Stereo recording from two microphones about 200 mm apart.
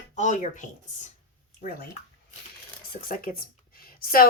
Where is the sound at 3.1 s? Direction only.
45° left (ahead or behind).